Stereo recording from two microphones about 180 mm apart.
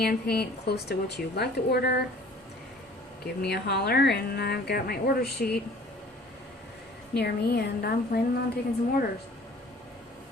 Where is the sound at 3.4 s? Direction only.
65° left (ahead or behind).